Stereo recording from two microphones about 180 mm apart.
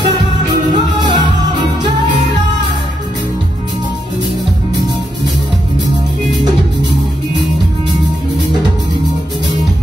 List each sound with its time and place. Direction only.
0.7 s music: 25° right (ahead or behind)